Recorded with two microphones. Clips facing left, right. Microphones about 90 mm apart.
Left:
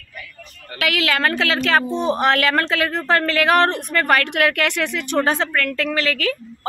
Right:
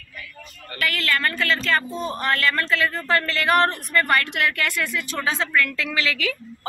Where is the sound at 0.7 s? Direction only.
90° left.